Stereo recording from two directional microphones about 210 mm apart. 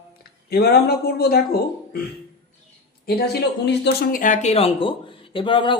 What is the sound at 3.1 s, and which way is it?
Speech, 50° left (ahead or behind).